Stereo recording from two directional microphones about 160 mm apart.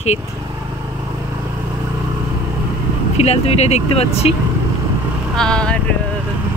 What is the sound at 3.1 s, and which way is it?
Speech, 40° left (ahead or behind).